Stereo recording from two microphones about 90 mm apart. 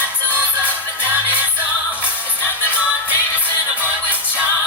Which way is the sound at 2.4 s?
25° left (ahead or behind).